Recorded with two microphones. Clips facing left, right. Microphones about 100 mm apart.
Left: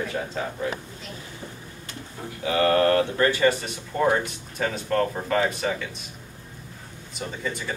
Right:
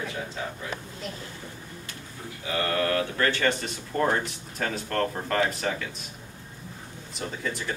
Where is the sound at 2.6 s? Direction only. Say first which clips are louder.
Left 7 dB; 40° left (ahead or behind).